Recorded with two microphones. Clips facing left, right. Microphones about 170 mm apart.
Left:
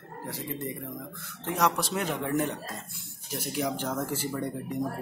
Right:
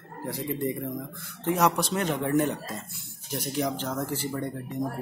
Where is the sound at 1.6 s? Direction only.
Centre (ahead or behind).